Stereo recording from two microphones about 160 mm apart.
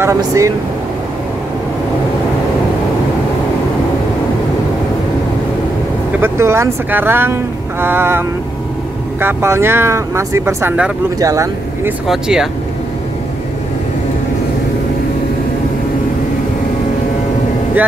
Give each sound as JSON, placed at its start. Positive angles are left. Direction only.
{"t": 0.0, "sound": "speech", "side_deg": -20}
{"t": 6.2, "sound": "speech", "side_deg": -15}
{"t": 12.1, "sound": "speech", "side_deg": -5}